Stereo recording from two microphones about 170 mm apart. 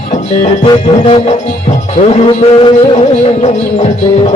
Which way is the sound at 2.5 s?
30° left (ahead or behind).